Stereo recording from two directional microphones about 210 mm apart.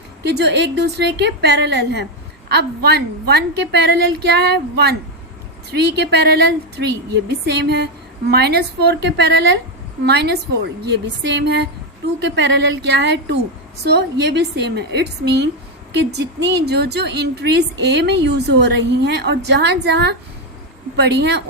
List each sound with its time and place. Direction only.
0.2 s a woman's voice: 55° right (ahead or behind)